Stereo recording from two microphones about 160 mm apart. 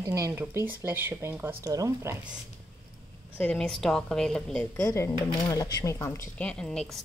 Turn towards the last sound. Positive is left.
turn(degrees=5)  # may be behind; listen again after turning